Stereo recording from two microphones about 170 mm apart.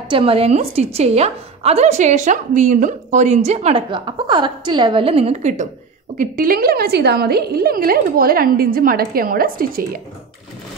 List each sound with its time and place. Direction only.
0.1 s a woman's voice: 35° right (ahead or behind)
6.1 s a woman's voice: 55° right (ahead or behind)